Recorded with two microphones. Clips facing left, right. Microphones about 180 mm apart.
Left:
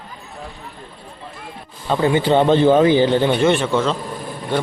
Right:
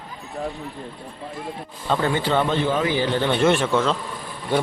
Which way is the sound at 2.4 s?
30° left (ahead or behind).